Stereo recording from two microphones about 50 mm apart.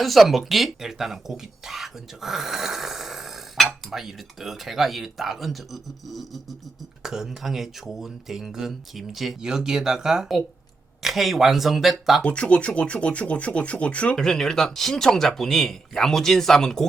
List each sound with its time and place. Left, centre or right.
0.0 s speech: centre
12.2 s speech: left
14.2 s speech: centre